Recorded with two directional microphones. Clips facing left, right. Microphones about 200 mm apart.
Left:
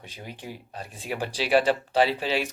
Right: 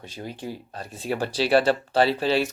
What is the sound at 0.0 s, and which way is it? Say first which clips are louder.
Speech: right 5 dB; 15° left (ahead or behind).